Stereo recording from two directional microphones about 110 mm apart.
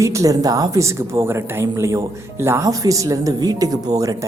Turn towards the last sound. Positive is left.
turn(degrees=-30)  # may be behind; listen again after turning